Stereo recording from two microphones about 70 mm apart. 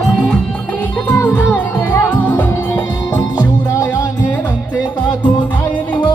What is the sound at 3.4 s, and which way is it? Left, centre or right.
Music, left.